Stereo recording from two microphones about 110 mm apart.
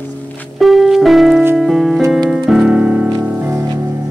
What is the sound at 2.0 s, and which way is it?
Music, 30° right (ahead or behind).